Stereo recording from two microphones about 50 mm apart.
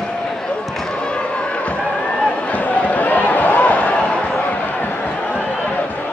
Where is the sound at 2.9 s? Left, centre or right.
Left.